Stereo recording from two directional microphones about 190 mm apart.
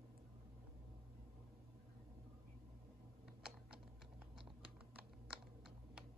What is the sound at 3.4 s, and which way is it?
Typing, 55° right (ahead or behind).